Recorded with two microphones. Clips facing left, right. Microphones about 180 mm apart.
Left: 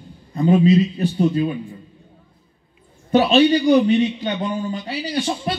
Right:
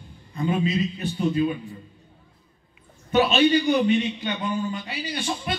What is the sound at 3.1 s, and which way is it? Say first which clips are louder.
A man's voice: left 5 dB; 35° left (ahead or behind).